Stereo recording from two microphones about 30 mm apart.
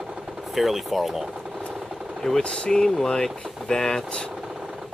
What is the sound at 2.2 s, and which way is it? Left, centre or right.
Speech, left.